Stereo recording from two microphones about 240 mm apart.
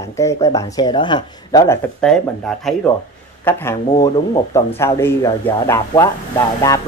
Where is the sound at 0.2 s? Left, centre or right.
Centre.